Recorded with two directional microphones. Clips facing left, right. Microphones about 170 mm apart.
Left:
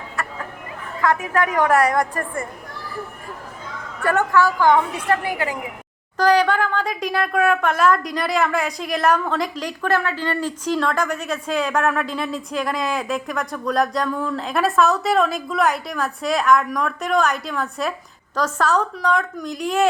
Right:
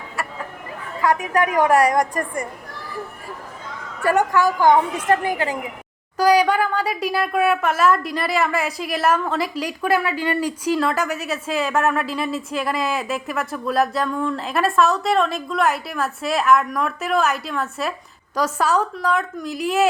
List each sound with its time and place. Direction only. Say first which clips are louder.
0.2 s a sound: even; 10° right (ahead or behind)
1.0 s a woman's voice: right 1 dB; 15° right (ahead or behind)
4.0 s a woman's voice: even; 10° right (ahead or behind)
6.1 s speech: right 1 dB; 10° right (ahead or behind)